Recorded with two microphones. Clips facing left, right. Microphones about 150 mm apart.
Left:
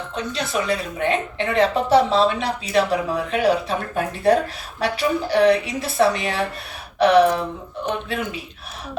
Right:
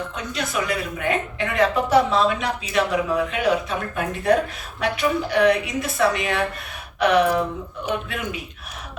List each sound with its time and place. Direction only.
0.2 s a woman's voice: 30° left (ahead or behind)